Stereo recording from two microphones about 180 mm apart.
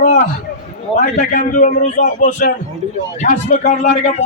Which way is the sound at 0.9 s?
40° left (ahead or behind).